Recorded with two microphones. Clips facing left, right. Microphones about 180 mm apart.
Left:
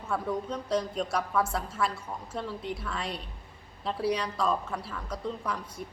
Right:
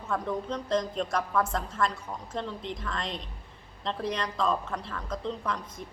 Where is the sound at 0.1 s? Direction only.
10° left (ahead or behind).